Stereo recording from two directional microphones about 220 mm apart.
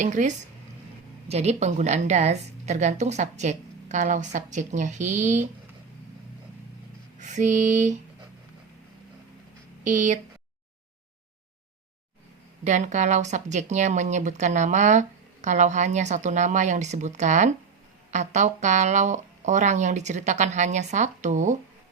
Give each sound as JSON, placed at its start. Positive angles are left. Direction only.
{"t": 0.0, "sound": "speech", "side_deg": -35}
{"t": 7.2, "sound": "speech", "side_deg": -35}
{"t": 9.8, "sound": "speech", "side_deg": -35}
{"t": 12.6, "sound": "speech", "side_deg": -35}